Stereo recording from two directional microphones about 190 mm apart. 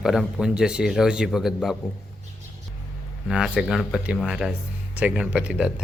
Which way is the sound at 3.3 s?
Centre (ahead or behind).